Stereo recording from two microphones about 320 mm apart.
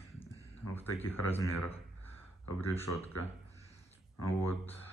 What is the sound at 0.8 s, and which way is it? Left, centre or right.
Speech, centre.